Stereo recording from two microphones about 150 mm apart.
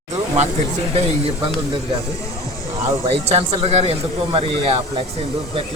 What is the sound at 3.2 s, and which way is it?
Speech, 45° right (ahead or behind).